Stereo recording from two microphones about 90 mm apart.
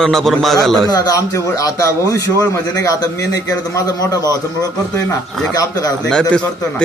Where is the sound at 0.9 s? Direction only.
40° left (ahead or behind).